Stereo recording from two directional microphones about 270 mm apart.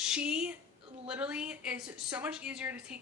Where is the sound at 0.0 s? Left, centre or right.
Centre.